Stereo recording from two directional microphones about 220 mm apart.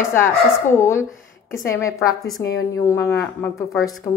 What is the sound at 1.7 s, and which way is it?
A woman's voice, 15° left (ahead or behind).